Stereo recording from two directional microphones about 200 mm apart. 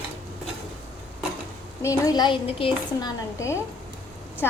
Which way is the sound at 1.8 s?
15° left (ahead or behind).